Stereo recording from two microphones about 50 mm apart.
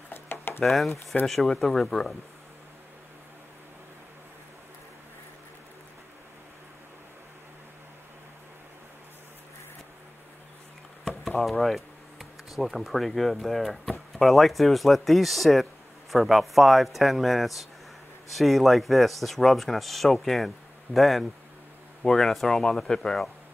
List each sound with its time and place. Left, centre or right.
0.1 s a sound: left
0.7 s speech: centre
11.1 s speech: centre